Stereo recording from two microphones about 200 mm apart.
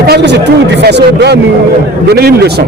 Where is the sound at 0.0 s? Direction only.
55° right (ahead or behind).